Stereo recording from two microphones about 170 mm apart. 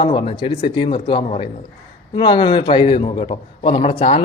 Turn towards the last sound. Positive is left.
turn(degrees=35)  # may be behind; listen again after turning